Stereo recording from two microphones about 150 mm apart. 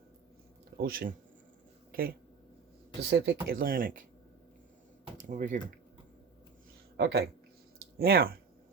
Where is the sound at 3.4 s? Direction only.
75° right (ahead or behind).